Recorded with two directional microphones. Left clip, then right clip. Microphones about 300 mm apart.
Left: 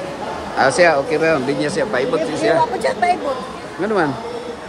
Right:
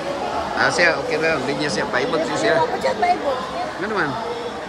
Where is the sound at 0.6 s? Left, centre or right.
Centre.